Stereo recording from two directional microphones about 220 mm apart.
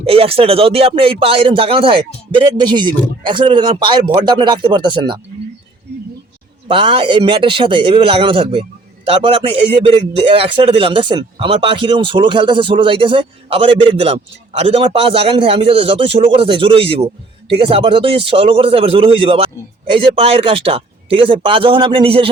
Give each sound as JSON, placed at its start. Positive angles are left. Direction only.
{"t": 0.0, "sound": "speech", "side_deg": -25}
{"t": 6.7, "sound": "speech", "side_deg": -25}